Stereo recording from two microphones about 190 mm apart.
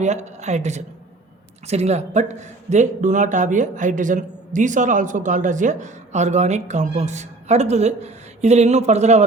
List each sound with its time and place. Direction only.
0.0 s speech: 35° right (ahead or behind)